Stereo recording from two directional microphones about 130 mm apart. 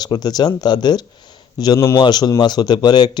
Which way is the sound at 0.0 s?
30° left (ahead or behind).